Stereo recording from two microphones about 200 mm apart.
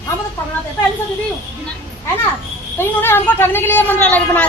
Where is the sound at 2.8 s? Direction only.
10° left (ahead or behind).